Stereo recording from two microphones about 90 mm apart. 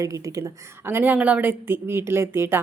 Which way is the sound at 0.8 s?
25° right (ahead or behind).